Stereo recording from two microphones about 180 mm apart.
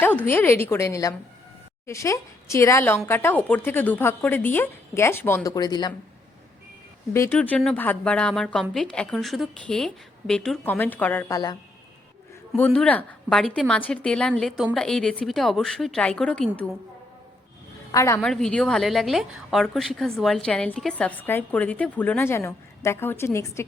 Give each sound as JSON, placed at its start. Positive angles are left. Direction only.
{"t": 0.3, "sound": "a woman's voice", "side_deg": 10}
{"t": 7.1, "sound": "a woman's voice", "side_deg": 10}
{"t": 12.5, "sound": "a woman's voice", "side_deg": 5}
{"t": 17.9, "sound": "a woman's voice", "side_deg": 15}
{"t": 18.2, "sound": "a woman's voice", "side_deg": 5}